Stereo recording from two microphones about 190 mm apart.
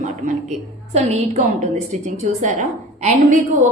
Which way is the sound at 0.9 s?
35° right (ahead or behind).